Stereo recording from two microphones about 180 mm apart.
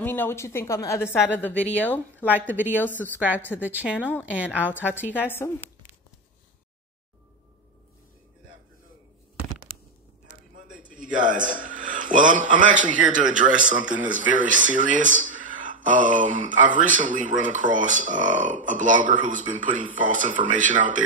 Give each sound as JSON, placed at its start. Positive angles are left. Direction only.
{"t": 0.0, "sound": "a woman's voice", "side_deg": 10}
{"t": 2.2, "sound": "a woman's voice", "side_deg": -10}
{"t": 2.7, "sound": "a woman's voice", "side_deg": 10}
{"t": 3.6, "sound": "a woman's voice", "side_deg": -10}
{"t": 5.1, "sound": "a woman's voice", "side_deg": 10}
{"t": 10.5, "sound": "a sound", "side_deg": -45}
{"t": 11.0, "sound": "a man's voice", "side_deg": -45}